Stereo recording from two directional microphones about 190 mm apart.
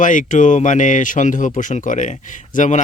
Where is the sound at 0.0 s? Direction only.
40° left (ahead or behind).